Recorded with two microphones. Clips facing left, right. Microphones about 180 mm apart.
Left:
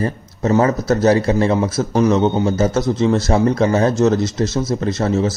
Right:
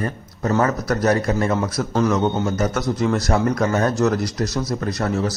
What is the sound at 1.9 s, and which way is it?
A man's voice, 15° left (ahead or behind).